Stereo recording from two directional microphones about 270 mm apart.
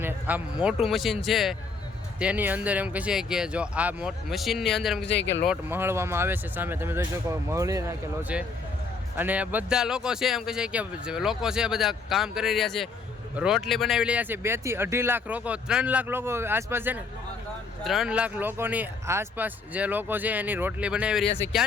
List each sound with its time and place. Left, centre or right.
0.0 s speech: centre
5.0 s speech: left
5.5 s speech: centre
21.3 s speech: centre